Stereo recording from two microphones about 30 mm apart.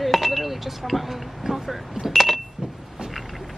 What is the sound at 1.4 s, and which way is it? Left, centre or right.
Speech, centre.